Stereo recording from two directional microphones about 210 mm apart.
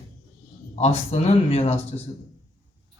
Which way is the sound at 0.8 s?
30° left (ahead or behind).